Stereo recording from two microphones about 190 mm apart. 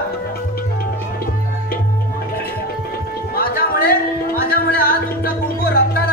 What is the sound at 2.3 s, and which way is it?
Music, 55° left (ahead or behind).